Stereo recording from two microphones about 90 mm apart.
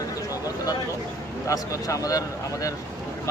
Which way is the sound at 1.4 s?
40° left (ahead or behind).